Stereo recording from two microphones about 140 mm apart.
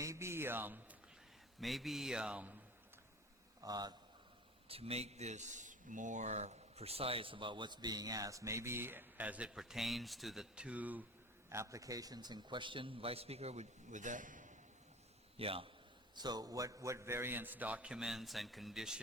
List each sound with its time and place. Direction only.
0.0 s a sound: 20° right (ahead or behind)
1.6 s speech: centre (ahead or behind)
3.6 s speech: 30° right (ahead or behind)
4.7 s a man's voice: 45° right (ahead or behind); by 14.6 s 65° right (ahead or behind)
15.4 s a man's voice: 40° right (ahead or behind)
16.1 s a man's voice: 30° right (ahead or behind); by 18.9 s centre (ahead or behind)